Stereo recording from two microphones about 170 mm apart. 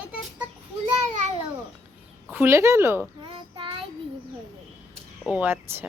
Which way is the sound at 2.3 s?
15° right (ahead or behind).